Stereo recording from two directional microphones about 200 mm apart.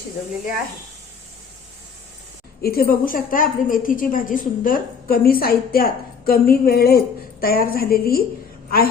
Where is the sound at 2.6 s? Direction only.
50° left (ahead or behind).